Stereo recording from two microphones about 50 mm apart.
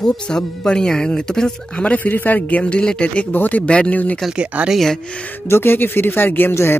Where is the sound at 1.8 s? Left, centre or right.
Left.